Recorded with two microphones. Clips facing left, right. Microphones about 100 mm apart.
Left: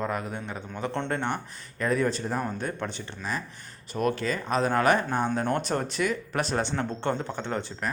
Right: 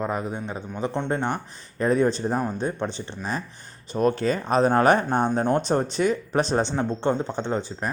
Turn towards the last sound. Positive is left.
turn(degrees=-20)  # may be behind; listen again after turning